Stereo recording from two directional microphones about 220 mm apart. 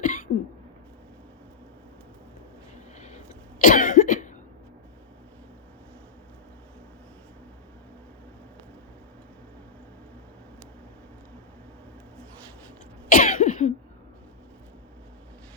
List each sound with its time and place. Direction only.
0.0 s cough: 35° left (ahead or behind)
3.6 s cough: 35° left (ahead or behind)
13.1 s cough: 40° left (ahead or behind)